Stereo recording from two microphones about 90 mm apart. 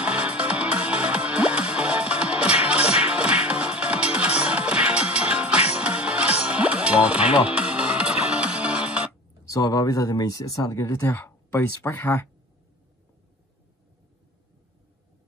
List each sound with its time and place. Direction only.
0.0 s music: 15° right (ahead or behind)
9.5 s speech: 40° left (ahead or behind)